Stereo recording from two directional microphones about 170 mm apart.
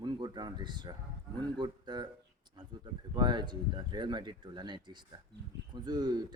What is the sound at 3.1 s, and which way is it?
Speech, 25° right (ahead or behind).